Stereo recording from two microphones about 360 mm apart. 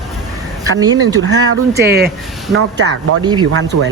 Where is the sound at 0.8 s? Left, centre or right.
Centre.